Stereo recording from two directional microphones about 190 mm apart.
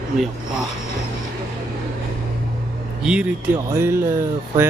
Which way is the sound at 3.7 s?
15° right (ahead or behind).